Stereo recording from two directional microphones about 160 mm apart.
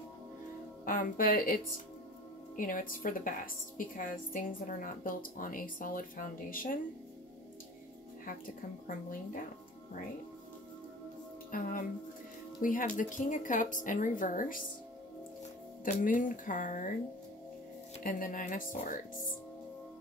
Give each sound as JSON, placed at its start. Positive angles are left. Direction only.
{"t": 0.8, "sound": "a woman's voice", "side_deg": 60}
{"t": 8.8, "sound": "a woman's voice", "side_deg": 60}
{"t": 11.5, "sound": "a woman's voice", "side_deg": 60}
{"t": 15.8, "sound": "a woman's voice", "side_deg": 55}
{"t": 18.0, "sound": "a woman's voice", "side_deg": 60}